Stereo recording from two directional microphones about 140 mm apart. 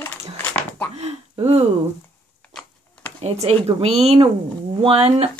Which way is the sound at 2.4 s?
10° left (ahead or behind).